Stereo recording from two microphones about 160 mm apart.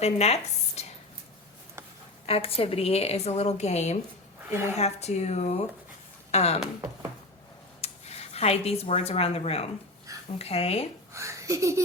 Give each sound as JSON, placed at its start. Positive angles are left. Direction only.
{"t": 0.0, "sound": "speech", "side_deg": 40}
{"t": 0.8, "sound": "a sound", "side_deg": 45}
{"t": 2.2, "sound": "a woman's voice", "side_deg": 35}
{"t": 7.8, "sound": "a woman's voice", "side_deg": 40}
{"t": 11.1, "sound": "speech", "side_deg": -20}